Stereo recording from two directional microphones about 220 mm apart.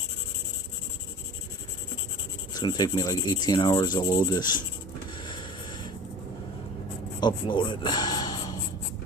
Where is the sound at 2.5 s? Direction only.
20° left (ahead or behind).